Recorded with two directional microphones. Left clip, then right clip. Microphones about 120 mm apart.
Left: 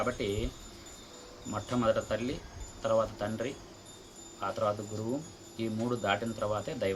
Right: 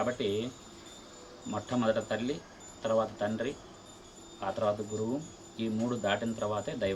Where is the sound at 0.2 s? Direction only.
25° left (ahead or behind).